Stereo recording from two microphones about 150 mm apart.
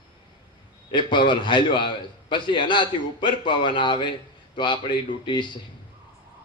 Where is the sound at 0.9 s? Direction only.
30° left (ahead or behind).